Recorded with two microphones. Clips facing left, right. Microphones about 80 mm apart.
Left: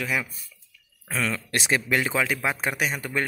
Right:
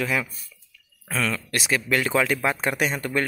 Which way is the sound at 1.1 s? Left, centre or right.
Centre.